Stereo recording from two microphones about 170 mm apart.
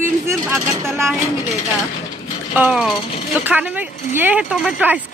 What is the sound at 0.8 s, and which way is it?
Speech, 15° right (ahead or behind).